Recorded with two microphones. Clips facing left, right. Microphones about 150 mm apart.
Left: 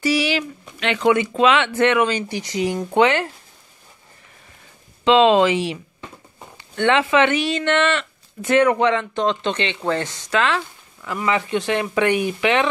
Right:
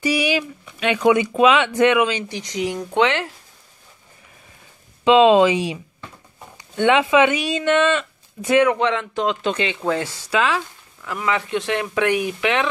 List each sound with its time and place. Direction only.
0.0 s speech: 15° right (ahead or behind); by 3.3 s 5° left (ahead or behind)
5.0 s speech: 10° right (ahead or behind)